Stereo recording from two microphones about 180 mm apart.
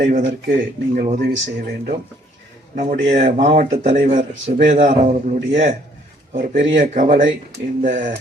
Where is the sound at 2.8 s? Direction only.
45° right (ahead or behind).